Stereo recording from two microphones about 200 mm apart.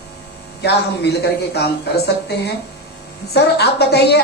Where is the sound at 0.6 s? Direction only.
55° left (ahead or behind).